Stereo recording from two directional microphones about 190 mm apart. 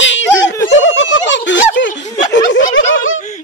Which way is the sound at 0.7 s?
80° left.